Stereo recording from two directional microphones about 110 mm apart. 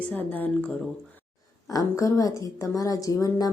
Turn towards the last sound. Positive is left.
turn(degrees=35)  # may be behind; listen again after turning